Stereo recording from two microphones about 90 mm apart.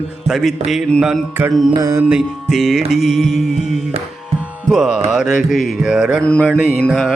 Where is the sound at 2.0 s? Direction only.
15° right (ahead or behind).